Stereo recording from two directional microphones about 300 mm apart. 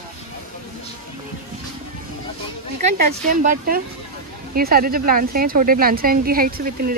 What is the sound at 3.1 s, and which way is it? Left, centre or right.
A woman's voice, right.